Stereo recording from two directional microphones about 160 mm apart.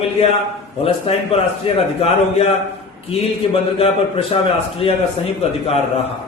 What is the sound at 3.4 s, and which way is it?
A man's voice, 35° left (ahead or behind).